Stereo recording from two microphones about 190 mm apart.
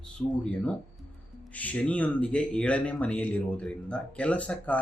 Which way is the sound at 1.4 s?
10° left (ahead or behind).